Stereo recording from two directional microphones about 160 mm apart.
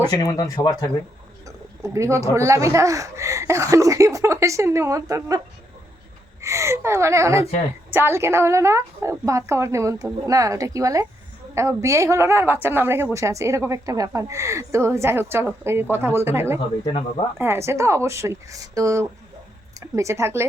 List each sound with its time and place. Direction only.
0.1 s speech: 20° left (ahead or behind)
1.5 s speech: 20° right (ahead or behind)
6.4 s a woman's voice: 15° right (ahead or behind)
16.8 s speech: 35° left (ahead or behind)
17.3 s a woman's voice: 15° right (ahead or behind)